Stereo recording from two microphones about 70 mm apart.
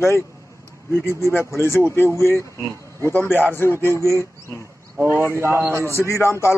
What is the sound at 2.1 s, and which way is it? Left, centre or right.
Speech, left.